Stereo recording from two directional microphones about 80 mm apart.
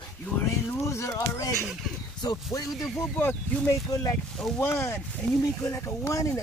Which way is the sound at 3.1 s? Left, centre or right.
Centre.